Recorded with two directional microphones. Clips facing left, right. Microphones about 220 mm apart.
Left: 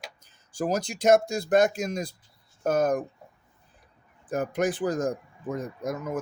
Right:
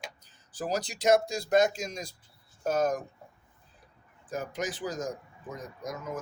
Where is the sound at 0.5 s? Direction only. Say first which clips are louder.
Left 5 dB; 45° left (ahead or behind).